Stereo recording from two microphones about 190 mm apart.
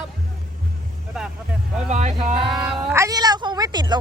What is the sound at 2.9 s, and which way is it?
Speech, 15° right (ahead or behind).